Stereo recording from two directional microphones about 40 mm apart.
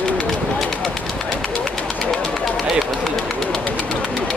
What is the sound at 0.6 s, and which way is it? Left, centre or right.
Bird, centre.